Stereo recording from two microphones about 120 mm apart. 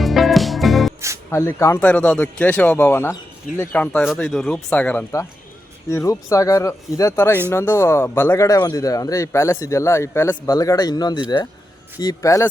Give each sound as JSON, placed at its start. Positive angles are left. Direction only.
{"t": 0.0, "sound": "music", "side_deg": 0}
{"t": 1.3, "sound": "speech", "side_deg": 20}
{"t": 1.8, "sound": "a man's voice", "side_deg": 10}
{"t": 4.0, "sound": "a man's voice", "side_deg": 0}
{"t": 5.9, "sound": "speech", "side_deg": 25}